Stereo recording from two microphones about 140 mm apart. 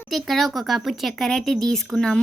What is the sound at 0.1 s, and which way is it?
Speech, centre (ahead or behind).